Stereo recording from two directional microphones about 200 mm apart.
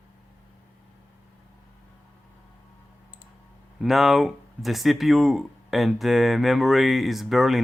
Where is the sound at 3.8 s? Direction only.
Centre (ahead or behind).